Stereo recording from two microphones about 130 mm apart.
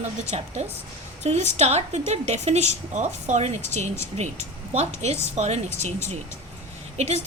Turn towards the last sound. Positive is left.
turn(degrees=-60)  # may be behind; listen again after turning